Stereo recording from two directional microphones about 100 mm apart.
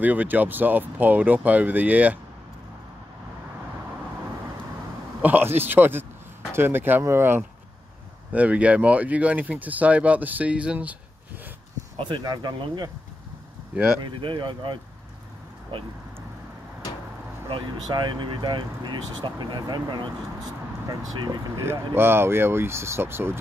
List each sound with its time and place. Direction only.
0.0 s speech: 15° right (ahead or behind)
5.2 s speech: 20° right (ahead or behind)
12.0 s speech: 45° right (ahead or behind)
13.7 s speech: 20° right (ahead or behind)
14.0 s speech: 55° right (ahead or behind)
17.8 s speech: 50° right (ahead or behind)
21.5 s speech: 25° right (ahead or behind)